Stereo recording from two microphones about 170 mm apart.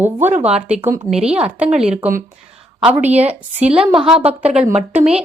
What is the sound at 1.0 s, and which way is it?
A woman's voice, 5° right (ahead or behind).